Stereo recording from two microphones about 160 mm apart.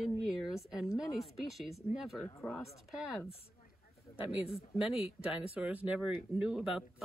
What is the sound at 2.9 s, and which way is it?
Speech, 5° right (ahead or behind).